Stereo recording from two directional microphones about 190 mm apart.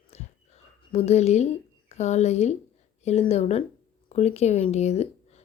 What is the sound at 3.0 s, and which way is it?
A woman's voice, 35° left (ahead or behind).